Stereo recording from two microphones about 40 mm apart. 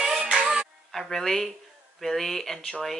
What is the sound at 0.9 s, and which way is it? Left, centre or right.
Speech, centre.